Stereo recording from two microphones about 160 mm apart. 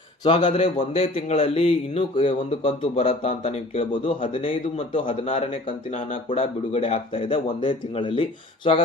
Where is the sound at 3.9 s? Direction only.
35° left (ahead or behind).